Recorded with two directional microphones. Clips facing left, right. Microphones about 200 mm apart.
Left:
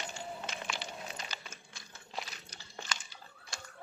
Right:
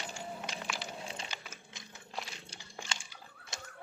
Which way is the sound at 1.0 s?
30° right (ahead or behind).